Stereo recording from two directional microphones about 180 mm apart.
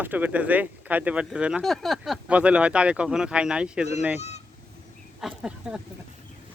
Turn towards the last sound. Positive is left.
turn(degrees=-5)  # may be behind; listen again after turning